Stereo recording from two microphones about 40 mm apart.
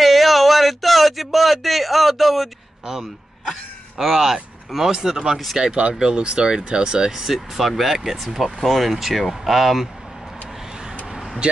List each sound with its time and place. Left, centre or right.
0.0 s a sound: centre
2.9 s speech: centre
5.6 s speech: right; by 9.8 s centre
11.4 s speech: right